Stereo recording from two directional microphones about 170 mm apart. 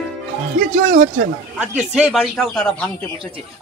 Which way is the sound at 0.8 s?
50° right (ahead or behind).